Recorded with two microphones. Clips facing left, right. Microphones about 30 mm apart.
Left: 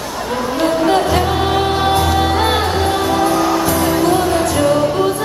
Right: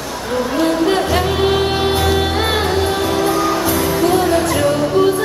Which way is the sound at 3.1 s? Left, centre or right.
Left.